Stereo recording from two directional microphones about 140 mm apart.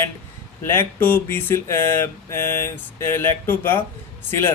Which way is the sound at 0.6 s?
15° left (ahead or behind).